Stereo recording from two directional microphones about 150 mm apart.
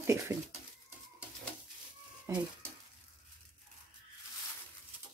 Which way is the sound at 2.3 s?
20° right (ahead or behind).